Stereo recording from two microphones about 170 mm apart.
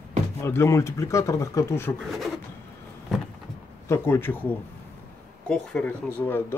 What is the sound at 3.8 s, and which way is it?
Speech, 15° left (ahead or behind).